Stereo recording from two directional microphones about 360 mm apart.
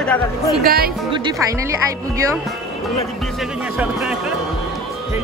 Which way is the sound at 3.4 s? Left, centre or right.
Centre.